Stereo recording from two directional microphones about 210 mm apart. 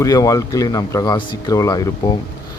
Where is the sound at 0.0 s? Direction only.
15° left (ahead or behind).